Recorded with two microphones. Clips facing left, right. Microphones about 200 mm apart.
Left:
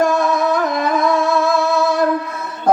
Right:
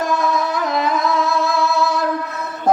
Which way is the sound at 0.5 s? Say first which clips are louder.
Left 2 dB; 50° left (ahead or behind).